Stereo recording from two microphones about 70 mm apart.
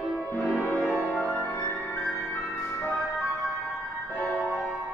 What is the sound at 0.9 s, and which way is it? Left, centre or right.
Music, left.